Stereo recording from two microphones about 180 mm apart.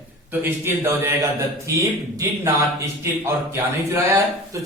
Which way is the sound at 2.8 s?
15° right (ahead or behind).